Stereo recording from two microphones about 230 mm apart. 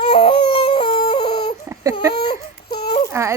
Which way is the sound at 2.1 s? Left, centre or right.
Left.